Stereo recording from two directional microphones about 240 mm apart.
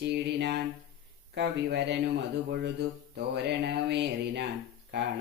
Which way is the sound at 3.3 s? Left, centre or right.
Right.